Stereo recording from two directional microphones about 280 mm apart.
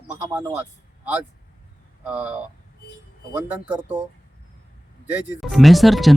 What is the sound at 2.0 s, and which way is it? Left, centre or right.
Speech, centre.